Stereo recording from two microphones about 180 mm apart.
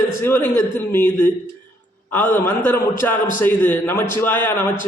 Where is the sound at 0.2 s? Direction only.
10° left (ahead or behind).